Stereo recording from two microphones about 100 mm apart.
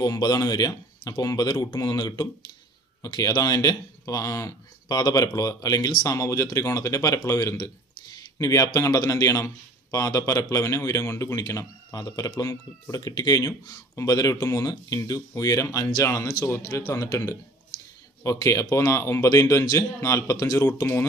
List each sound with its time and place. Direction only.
0.0 s a man's voice: 40° left (ahead or behind)
18.2 s a man's voice: 30° left (ahead or behind)